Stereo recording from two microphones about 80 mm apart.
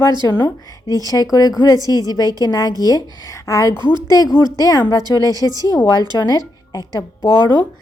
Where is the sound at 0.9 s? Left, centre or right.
Left.